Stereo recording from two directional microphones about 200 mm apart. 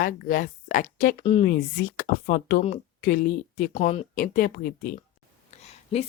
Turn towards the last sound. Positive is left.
turn(degrees=30)  # may be behind; listen again after turning